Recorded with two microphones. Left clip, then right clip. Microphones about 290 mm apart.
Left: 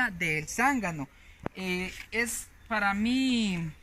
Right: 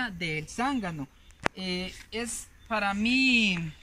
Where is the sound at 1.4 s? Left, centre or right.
Right.